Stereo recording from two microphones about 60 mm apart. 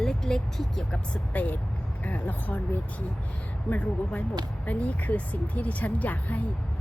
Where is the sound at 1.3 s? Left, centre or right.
Left.